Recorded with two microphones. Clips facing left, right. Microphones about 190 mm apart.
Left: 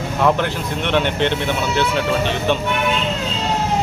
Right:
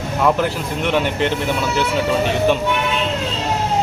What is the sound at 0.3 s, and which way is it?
Speech, 5° right (ahead or behind).